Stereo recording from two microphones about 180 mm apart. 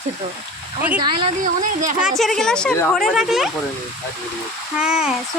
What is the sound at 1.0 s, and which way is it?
Speech, 30° right (ahead or behind).